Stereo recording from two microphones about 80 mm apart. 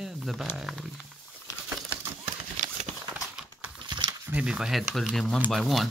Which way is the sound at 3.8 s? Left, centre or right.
Right.